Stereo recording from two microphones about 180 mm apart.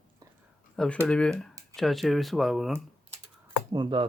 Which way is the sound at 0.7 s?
5° left (ahead or behind).